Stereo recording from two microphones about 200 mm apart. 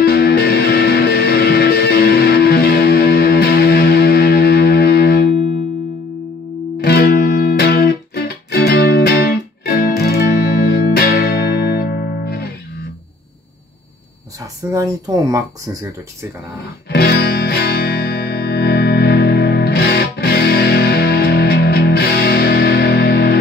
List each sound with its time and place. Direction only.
0.0 s music: 50° left (ahead or behind)
6.8 s music: 55° left (ahead or behind)
14.7 s speech: 15° right (ahead or behind)
16.9 s music: 50° left (ahead or behind)